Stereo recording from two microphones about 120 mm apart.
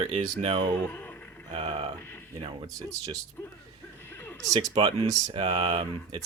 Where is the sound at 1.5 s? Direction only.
50° right (ahead or behind).